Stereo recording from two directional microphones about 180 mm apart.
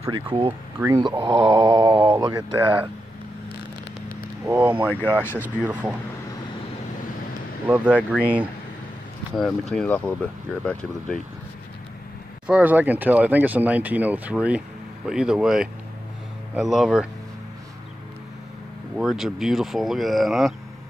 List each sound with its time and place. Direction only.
0.1 s speech: 30° right (ahead or behind)
0.8 s speech: 10° right (ahead or behind)
1.3 s a sound: 30° right (ahead or behind)
1.8 s mantra: 30° right (ahead or behind)
2.0 s speech: 15° right (ahead or behind)
4.5 s speech: 10° right (ahead or behind)
5.0 s speech: 10° left (ahead or behind)
5.7 s speech: 10° right (ahead or behind)
7.6 s speech: 10° right (ahead or behind)
12.4 s speech: 10° right (ahead or behind)
18.9 s speech: centre (ahead or behind)